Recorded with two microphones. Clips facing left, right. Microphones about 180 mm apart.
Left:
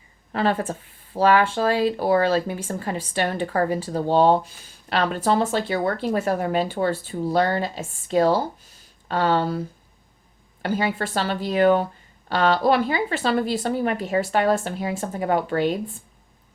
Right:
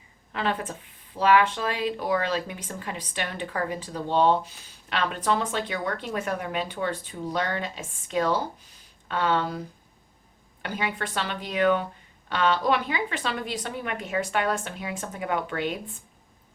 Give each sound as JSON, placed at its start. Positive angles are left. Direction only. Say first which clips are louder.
{"t": 0.3, "sound": "speech", "louder": "left 6 dB", "side_deg": 40}